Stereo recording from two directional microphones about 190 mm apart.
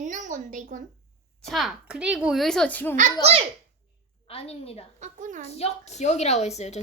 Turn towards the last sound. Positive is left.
turn(degrees=35)  # may be behind; listen again after turning